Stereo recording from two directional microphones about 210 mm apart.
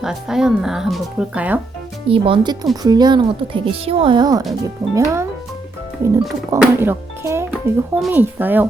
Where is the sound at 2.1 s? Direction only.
25° right (ahead or behind).